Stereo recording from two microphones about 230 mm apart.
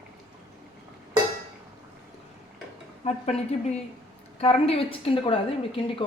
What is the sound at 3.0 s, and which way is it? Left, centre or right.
A woman's voice, left.